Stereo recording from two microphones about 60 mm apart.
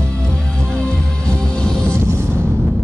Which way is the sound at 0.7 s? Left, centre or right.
Centre.